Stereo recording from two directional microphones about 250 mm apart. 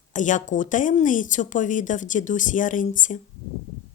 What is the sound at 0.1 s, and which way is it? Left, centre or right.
Speech, left.